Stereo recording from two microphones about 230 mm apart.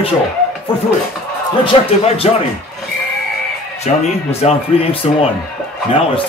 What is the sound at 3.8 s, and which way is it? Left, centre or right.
Speech, left.